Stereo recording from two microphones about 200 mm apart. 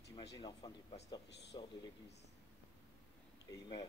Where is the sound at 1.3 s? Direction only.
60° left (ahead or behind).